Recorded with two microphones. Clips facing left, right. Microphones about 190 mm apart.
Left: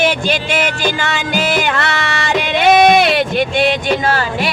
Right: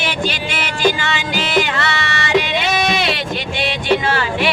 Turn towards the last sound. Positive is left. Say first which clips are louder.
# left 2 dB
turn(degrees=40)  # may be behind; listen again after turning